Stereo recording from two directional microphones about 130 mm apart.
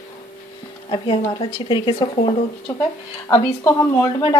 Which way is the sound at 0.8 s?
40° left (ahead or behind).